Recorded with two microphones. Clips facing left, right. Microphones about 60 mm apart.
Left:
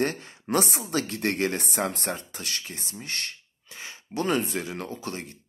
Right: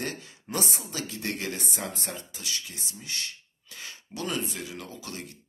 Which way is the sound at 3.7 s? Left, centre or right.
Left.